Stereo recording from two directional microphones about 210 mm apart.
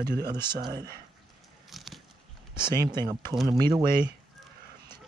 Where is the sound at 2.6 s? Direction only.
20° right (ahead or behind).